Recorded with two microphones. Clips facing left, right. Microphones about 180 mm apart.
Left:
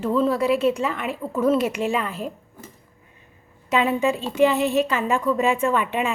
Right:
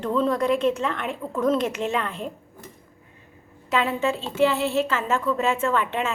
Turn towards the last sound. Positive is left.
turn(degrees=15)  # may be behind; listen again after turning